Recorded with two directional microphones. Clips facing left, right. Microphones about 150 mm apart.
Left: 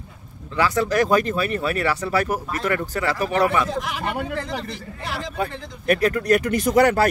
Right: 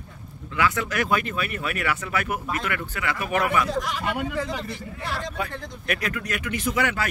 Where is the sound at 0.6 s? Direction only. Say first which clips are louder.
Left 5 dB; 35° left (ahead or behind).